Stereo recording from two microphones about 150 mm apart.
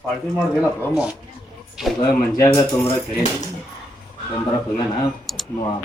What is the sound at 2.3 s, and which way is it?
Speech, 20° left (ahead or behind).